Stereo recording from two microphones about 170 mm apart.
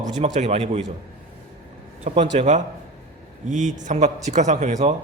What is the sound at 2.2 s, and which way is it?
A man's voice, 45° right (ahead or behind).